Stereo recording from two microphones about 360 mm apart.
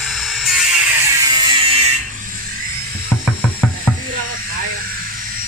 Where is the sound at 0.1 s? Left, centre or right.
Centre.